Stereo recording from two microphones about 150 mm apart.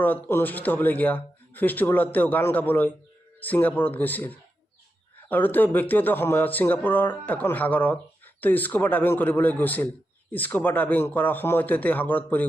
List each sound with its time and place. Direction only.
0.3 s a man's voice: 15° left (ahead or behind)